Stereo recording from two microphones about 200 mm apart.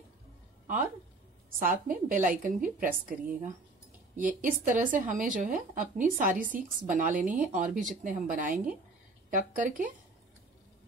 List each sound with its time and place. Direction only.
1.6 s speech: 45° right (ahead or behind)
7.2 s speech: 5° right (ahead or behind)
7.5 s speech: 40° right (ahead or behind)